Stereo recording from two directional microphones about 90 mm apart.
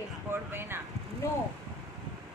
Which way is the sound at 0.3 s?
25° right (ahead or behind).